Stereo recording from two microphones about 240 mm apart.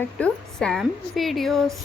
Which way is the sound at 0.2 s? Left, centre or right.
Centre.